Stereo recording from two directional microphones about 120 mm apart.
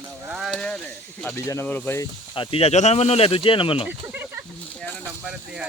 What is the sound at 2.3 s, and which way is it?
Speech, 50° left (ahead or behind).